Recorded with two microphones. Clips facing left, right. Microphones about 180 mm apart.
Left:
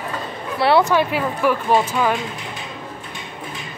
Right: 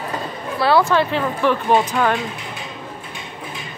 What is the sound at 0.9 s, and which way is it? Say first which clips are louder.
Speech: even; 10° left (ahead or behind).